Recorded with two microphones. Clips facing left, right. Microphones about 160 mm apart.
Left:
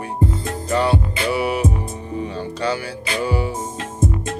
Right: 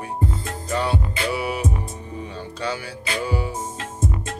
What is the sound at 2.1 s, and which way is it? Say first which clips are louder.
Music: left 8 dB; 75° left (ahead or behind).